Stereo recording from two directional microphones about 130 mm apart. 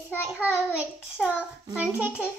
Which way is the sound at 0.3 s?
10° right (ahead or behind).